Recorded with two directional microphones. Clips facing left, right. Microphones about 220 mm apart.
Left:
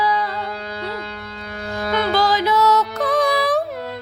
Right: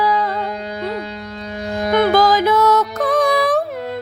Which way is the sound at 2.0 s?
50° right (ahead or behind).